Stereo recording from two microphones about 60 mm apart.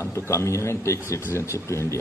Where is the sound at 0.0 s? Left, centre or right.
Left.